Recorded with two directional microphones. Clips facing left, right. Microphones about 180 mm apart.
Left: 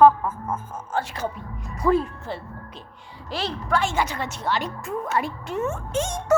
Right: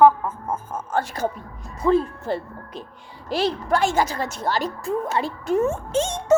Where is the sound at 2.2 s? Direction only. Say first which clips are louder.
Right 6 dB; 45° right (ahead or behind); by 6.3 s 25° right (ahead or behind).